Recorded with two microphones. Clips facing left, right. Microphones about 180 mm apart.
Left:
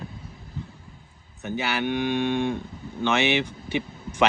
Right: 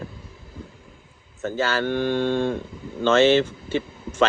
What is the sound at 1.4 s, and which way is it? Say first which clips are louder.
Speech: right 4 dB; 15° left (ahead or behind).